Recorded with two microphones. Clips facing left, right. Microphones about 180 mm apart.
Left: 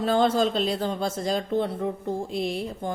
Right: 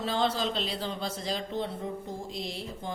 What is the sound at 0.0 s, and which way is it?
A woman's voice, 50° left (ahead or behind).